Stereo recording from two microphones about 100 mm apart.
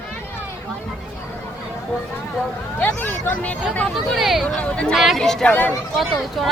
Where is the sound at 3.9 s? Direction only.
Centre (ahead or behind).